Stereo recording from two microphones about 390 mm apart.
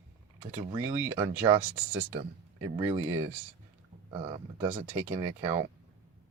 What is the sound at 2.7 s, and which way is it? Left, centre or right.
Speech, centre.